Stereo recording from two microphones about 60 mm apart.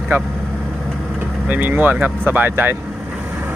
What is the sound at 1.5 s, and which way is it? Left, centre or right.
Speech, right.